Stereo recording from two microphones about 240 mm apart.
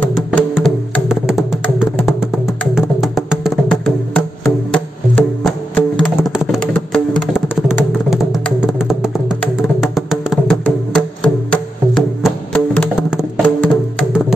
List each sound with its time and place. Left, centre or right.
0.0 s music: centre